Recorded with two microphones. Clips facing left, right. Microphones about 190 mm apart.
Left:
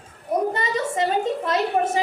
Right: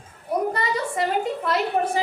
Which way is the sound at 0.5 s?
20° left (ahead or behind).